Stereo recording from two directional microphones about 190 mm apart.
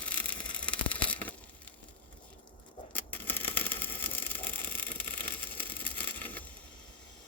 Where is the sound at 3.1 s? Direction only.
10° left (ahead or behind).